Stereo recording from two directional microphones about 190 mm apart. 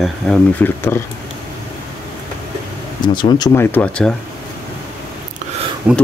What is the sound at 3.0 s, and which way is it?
Speech, 20° left (ahead or behind).